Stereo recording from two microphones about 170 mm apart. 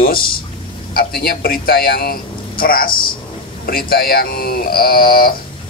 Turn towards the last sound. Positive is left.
turn(degrees=60)  # may be behind; listen again after turning